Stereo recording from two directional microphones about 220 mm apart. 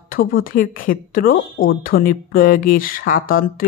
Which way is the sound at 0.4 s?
40° left (ahead or behind).